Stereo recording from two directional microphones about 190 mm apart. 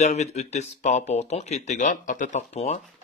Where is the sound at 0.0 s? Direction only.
35° left (ahead or behind).